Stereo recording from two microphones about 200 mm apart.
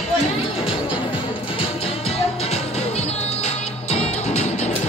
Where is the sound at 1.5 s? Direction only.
30° left (ahead or behind).